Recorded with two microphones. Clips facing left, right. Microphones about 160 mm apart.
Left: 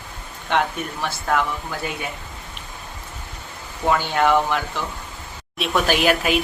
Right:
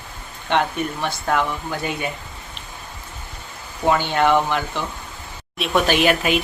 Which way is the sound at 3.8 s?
Centre (ahead or behind).